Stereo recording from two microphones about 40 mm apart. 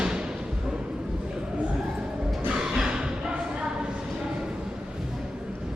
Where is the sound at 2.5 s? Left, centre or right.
Centre.